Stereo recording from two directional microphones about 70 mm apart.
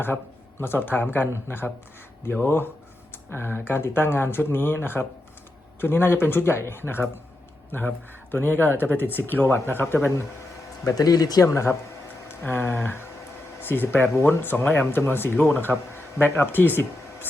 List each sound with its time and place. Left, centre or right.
0.6 s speech: left
10.8 s speech: left
11.4 s speech: left